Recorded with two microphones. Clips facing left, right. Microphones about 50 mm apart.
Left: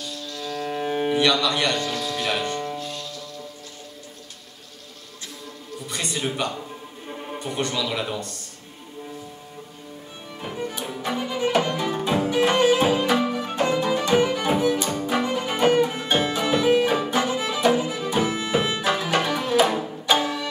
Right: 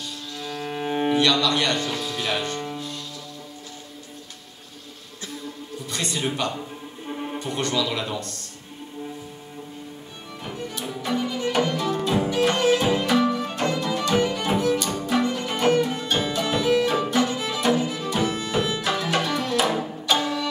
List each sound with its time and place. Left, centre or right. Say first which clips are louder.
0.4 s music: left 2 dB; centre
1.1 s a man's voice: even; centre
1.9 s music: left 1 dB; centre
5.9 s music: right 1 dB; centre
7.1 s music: right 3 dB; centre
7.3 s a man's voice: right 1 dB; centre
10.4 s music: left 2 dB; centre